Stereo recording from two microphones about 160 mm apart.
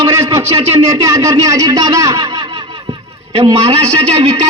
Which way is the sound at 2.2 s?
30° right (ahead or behind).